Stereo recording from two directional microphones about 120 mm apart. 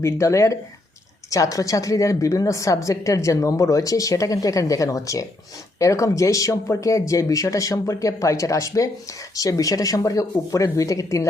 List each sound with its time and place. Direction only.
0.0 s a woman's voice: 25° left (ahead or behind)